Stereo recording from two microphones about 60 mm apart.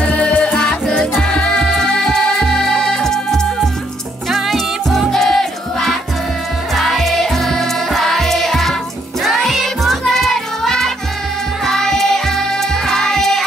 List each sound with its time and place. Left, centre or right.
0.0 s music: left; by 13.4 s centre